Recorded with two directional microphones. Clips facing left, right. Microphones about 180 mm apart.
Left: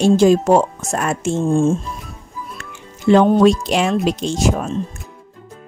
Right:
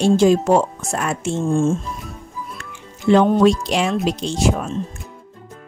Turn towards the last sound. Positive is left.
turn(degrees=40)  # may be behind; listen again after turning